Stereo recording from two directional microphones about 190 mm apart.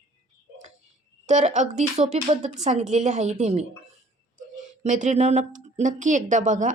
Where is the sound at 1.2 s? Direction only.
40° right (ahead or behind).